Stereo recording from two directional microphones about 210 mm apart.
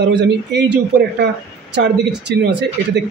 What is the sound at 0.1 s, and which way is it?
Speech, 55° right (ahead or behind).